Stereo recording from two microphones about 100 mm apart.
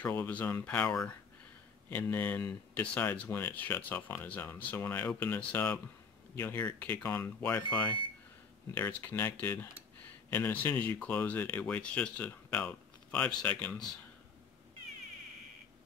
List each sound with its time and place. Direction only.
0.0 s speech: 20° left (ahead or behind)
1.9 s speech: 20° left (ahead or behind)